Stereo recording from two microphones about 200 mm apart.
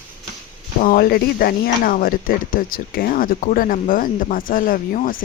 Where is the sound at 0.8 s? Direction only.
45° left (ahead or behind).